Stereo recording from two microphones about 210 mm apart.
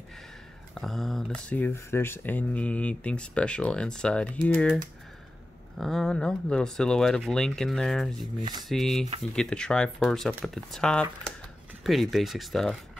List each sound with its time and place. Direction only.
0.7 s speech: centre (ahead or behind)
5.8 s speech: centre (ahead or behind)
8.4 s a sound: 20° right (ahead or behind)
8.6 s speech: centre (ahead or behind)